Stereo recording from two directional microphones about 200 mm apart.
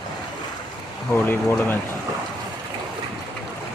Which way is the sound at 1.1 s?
10° left (ahead or behind).